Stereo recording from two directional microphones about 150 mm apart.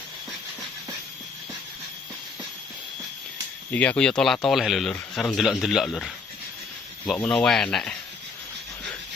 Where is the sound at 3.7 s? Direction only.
10° left (ahead or behind).